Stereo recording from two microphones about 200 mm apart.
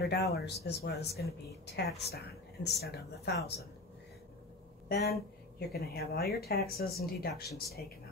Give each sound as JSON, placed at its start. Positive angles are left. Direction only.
{"t": 0.0, "sound": "speech", "side_deg": 55}
{"t": 4.8, "sound": "speech", "side_deg": 50}